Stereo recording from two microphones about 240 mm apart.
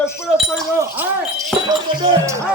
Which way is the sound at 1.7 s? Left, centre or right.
Centre.